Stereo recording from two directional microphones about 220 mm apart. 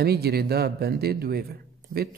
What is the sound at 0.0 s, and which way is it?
Speech, 45° right (ahead or behind).